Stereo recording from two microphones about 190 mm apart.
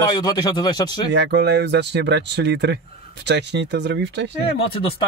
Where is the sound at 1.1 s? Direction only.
60° right (ahead or behind).